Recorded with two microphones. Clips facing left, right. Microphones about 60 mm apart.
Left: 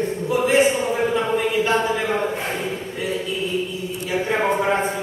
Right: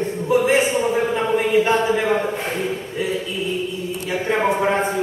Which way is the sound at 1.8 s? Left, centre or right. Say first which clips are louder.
Right 3 dB; centre.